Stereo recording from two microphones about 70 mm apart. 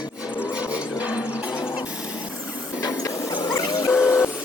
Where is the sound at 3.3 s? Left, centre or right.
Left.